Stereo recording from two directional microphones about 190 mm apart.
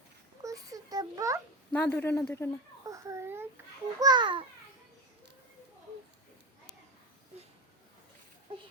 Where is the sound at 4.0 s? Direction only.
20° right (ahead or behind).